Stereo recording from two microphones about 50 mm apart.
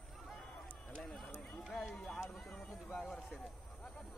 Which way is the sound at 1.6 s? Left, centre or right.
Centre.